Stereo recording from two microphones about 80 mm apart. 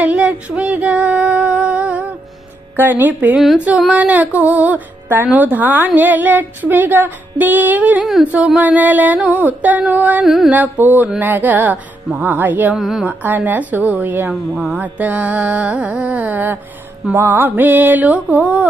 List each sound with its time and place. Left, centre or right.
0.0 s female singing: centre
2.7 s a woman's voice: right
8.2 s music: centre
8.5 s a woman's voice: centre
10.2 s a woman's voice: centre
10.5 s a woman's voice: right
12.7 s a woman's voice: centre
13.1 s a woman's voice: right
14.7 s music: right
17.2 s a woman's voice: right